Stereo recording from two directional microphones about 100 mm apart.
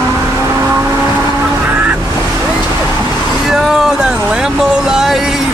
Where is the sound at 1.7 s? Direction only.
15° right (ahead or behind).